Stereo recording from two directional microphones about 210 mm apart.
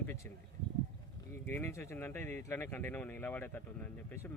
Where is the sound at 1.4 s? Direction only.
10° left (ahead or behind).